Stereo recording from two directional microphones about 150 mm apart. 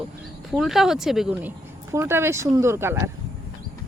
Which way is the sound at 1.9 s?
15° right (ahead or behind).